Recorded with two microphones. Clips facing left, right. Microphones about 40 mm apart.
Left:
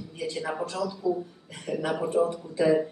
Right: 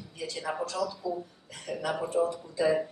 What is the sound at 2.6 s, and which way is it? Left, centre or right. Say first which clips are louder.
Speech: left 4 dB; centre.